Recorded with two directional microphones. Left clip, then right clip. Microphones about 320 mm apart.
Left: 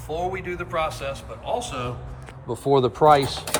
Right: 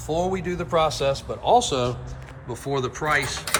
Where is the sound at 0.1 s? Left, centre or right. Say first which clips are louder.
Right 3 dB; centre.